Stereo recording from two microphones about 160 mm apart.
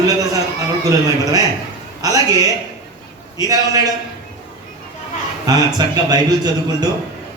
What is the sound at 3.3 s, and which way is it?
Speech, 20° right (ahead or behind).